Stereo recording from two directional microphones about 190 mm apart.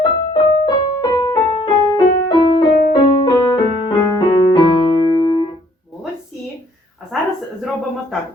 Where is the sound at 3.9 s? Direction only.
20° left (ahead or behind).